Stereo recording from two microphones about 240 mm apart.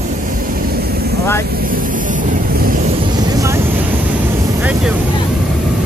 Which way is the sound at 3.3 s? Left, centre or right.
Centre.